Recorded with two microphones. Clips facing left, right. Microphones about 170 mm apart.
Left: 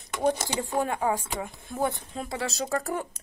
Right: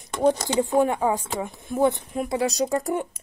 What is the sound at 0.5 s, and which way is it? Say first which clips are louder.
Speech: right 7 dB; 20° right (ahead or behind).